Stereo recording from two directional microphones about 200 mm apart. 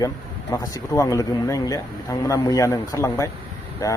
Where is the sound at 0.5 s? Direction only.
15° left (ahead or behind).